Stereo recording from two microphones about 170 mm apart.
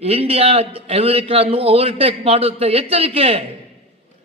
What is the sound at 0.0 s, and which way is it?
A man's voice, 35° right (ahead or behind).